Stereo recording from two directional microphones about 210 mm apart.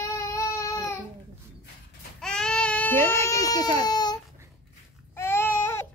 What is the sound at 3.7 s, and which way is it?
Baby cry, 20° left (ahead or behind).